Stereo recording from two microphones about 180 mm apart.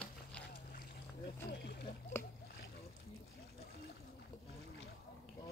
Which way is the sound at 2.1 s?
15° left (ahead or behind).